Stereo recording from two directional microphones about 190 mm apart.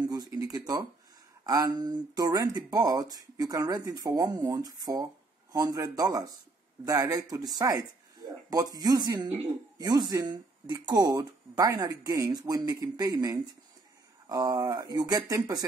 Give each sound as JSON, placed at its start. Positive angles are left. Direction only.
{"t": 0.0, "sound": "speech", "side_deg": -20}